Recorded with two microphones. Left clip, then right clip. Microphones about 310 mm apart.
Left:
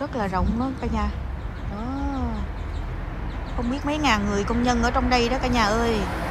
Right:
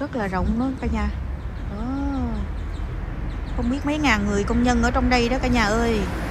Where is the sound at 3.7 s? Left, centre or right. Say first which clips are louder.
Right 1 dB; centre.